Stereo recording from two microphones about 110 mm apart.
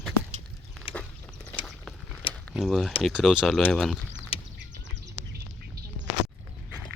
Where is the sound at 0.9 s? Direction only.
60° left (ahead or behind).